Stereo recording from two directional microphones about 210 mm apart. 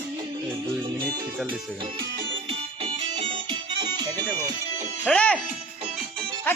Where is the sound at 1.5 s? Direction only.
25° right (ahead or behind).